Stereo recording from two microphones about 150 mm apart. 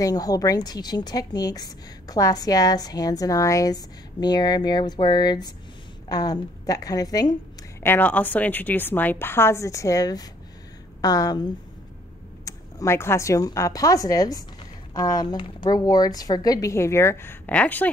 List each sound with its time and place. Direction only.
0.0 s a woman's voice: 25° left (ahead or behind)
7.8 s a woman's voice: 15° left (ahead or behind)